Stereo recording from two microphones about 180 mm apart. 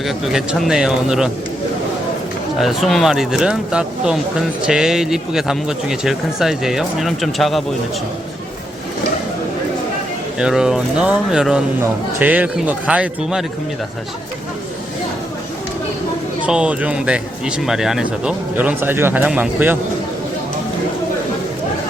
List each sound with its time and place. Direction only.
0.0 s speech: centre (ahead or behind)
2.6 s speech: centre (ahead or behind)
10.3 s speech: 5° right (ahead or behind)
16.5 s speech: 5° right (ahead or behind)